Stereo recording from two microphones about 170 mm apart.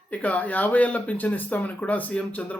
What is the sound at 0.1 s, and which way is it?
Speech, 10° left (ahead or behind).